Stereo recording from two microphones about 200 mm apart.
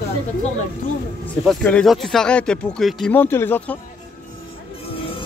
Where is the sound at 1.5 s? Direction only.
5° left (ahead or behind).